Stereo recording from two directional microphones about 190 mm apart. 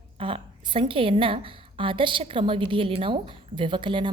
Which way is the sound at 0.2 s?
30° right (ahead or behind).